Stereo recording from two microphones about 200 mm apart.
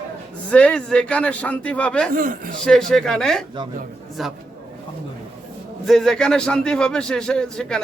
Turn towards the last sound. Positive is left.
turn(degrees=5)  # may be behind; listen again after turning